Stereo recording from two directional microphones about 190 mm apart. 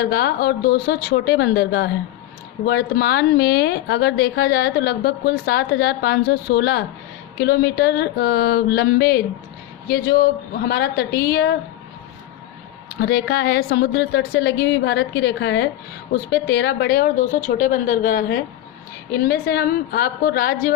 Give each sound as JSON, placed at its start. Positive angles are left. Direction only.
{"t": 0.0, "sound": "a woman's voice", "side_deg": 55}
{"t": 13.0, "sound": "a woman's voice", "side_deg": 55}